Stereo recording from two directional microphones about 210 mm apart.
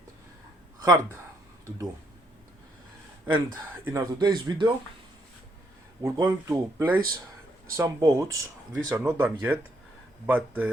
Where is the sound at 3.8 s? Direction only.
15° right (ahead or behind).